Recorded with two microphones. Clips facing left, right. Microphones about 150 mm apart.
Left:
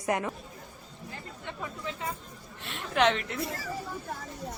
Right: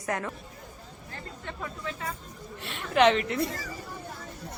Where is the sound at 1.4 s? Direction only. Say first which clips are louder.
Right 1 dB; 20° left (ahead or behind).